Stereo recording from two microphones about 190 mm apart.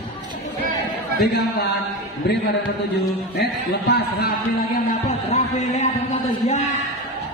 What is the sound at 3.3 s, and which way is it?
A man's voice, 60° left (ahead or behind).